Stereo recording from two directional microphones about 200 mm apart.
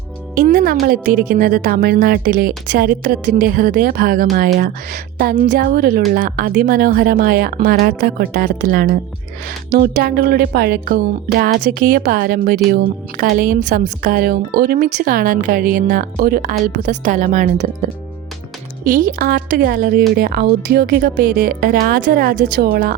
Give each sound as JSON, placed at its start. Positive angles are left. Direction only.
{"t": 0.3, "sound": "a woman's voice", "side_deg": -45}
{"t": 18.9, "sound": "a woman's voice", "side_deg": -45}